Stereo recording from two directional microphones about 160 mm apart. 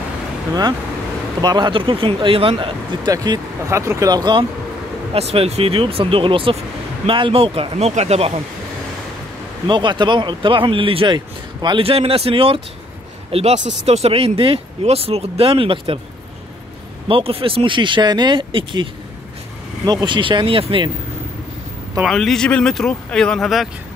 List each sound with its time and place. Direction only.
1.4 s speech: 25° right (ahead or behind)
3.1 s speech: 20° right (ahead or behind); by 8.3 s 40° right (ahead or behind)
9.7 s speech: 30° right (ahead or behind)
17.1 s speech: 35° right (ahead or behind)
19.9 s speech: 25° right (ahead or behind)
22.0 s speech: centre (ahead or behind)